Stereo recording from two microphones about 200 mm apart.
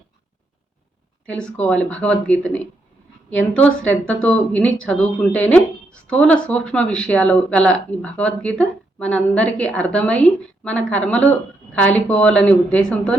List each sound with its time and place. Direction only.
1.3 s speech: 5° left (ahead or behind)